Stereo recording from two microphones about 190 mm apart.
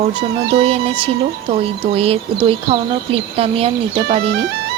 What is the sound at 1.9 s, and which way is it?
Speech, 30° right (ahead or behind).